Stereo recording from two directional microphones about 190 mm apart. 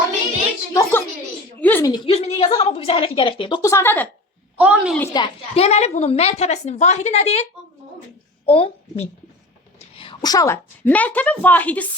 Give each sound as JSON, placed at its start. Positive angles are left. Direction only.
{"t": 0.7, "sound": "a sound", "side_deg": 15}
{"t": 1.9, "sound": "a woman's voice", "side_deg": 30}
{"t": 4.5, "sound": "a woman's voice", "side_deg": -5}
{"t": 5.1, "sound": "a woman's voice", "side_deg": 25}
{"t": 8.4, "sound": "a woman's voice", "side_deg": 30}
{"t": 9.7, "sound": "a sound", "side_deg": 30}
{"t": 10.2, "sound": "a woman's voice", "side_deg": 20}